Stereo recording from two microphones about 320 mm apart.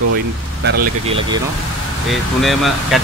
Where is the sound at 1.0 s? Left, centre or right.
Centre.